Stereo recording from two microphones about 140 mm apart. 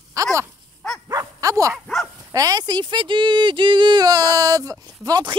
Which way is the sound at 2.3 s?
25° right (ahead or behind).